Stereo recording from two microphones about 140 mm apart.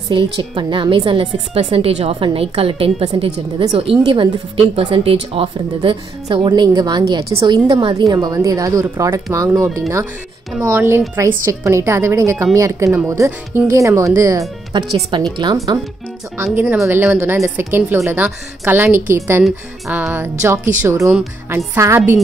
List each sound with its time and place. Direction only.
0.1 s a woman's voice: 35° right (ahead or behind)
15.1 s a woman's voice: 35° right (ahead or behind)
16.5 s a woman's voice: 10° right (ahead or behind)